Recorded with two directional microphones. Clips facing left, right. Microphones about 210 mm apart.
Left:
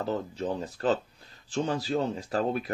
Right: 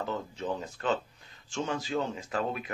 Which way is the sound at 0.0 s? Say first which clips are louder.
Left 4 dB; 35° left (ahead or behind).